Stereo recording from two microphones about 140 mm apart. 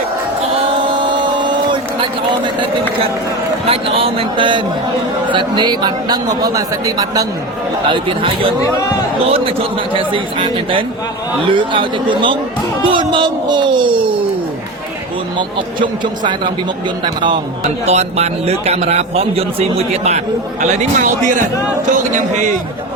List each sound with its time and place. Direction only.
1.1 s a sound: 35° right (ahead or behind)
3.7 s a man's voice: 40° right (ahead or behind); by 7.3 s 25° right (ahead or behind)
7.9 s a man's voice: 35° right (ahead or behind)
9.9 s a man's voice: 40° right (ahead or behind)
15.4 s a man's voice: 35° right (ahead or behind)
17.8 s a man's voice: 50° right (ahead or behind)